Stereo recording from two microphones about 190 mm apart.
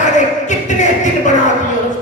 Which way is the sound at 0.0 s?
40° left (ahead or behind).